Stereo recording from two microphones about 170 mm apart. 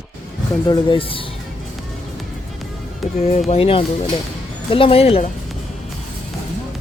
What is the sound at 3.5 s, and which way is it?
Speech, 35° left (ahead or behind).